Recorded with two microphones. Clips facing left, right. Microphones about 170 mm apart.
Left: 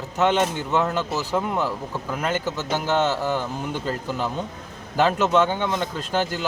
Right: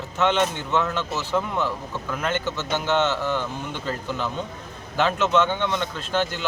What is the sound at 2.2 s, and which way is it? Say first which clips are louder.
Speech: left 1 dB; 40° left (ahead or behind).